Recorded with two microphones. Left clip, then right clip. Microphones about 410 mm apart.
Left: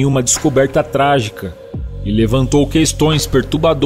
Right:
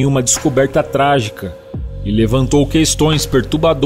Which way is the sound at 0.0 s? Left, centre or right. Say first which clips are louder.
Even; right.